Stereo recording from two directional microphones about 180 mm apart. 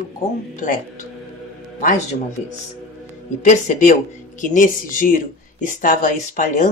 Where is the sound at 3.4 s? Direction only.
45° left (ahead or behind).